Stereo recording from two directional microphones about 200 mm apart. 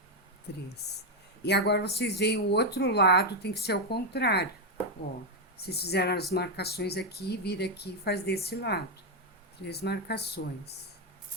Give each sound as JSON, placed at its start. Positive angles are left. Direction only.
{"t": 1.5, "sound": "speech", "side_deg": 55}
{"t": 5.5, "sound": "speech", "side_deg": 55}